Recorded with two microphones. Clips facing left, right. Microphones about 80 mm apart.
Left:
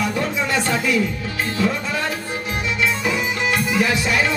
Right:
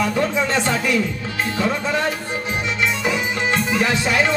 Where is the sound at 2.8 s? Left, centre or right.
Right.